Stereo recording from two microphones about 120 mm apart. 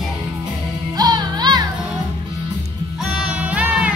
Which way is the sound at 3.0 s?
5° right (ahead or behind).